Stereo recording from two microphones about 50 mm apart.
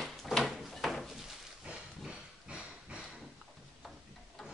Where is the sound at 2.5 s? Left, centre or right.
Right.